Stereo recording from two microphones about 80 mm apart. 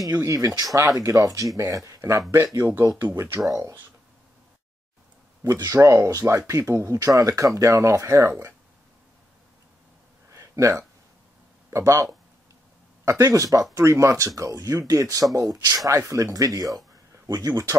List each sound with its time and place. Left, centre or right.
0.0 s speech: right
5.5 s speech: right
10.3 s a sound: right
11.7 s speech: right
17.3 s speech: right